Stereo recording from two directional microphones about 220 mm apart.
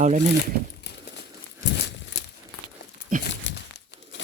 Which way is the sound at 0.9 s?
50° left (ahead or behind).